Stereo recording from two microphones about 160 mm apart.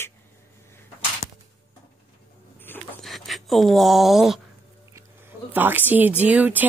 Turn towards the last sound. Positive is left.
turn(degrees=-10)  # may be behind; listen again after turning